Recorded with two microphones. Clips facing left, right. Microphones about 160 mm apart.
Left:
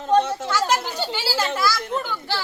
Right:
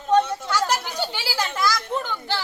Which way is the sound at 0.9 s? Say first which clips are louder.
Left 2 dB; 15° right (ahead or behind).